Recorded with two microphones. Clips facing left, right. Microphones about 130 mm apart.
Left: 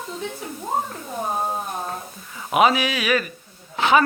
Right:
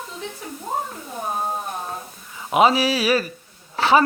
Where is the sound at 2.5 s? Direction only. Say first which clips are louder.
Right 1 dB; 30° right (ahead or behind).